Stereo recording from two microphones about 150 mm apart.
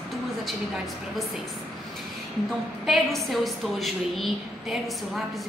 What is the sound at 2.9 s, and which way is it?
A woman's voice, centre (ahead or behind).